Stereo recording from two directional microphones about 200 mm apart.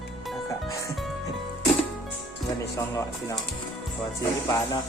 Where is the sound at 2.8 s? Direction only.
15° left (ahead or behind).